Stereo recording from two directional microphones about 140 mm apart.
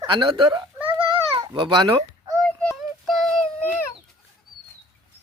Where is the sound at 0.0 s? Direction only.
35° right (ahead or behind).